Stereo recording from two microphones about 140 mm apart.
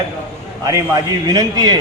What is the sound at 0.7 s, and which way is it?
A man's voice, 25° right (ahead or behind).